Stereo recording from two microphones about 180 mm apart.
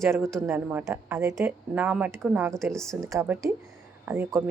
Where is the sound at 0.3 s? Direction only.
10° right (ahead or behind).